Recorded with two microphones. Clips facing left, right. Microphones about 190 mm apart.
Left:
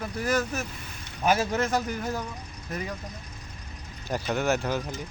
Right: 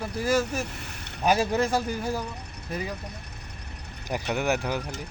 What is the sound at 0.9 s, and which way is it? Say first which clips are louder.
Boat: right 2 dB; 65° right (ahead or behind).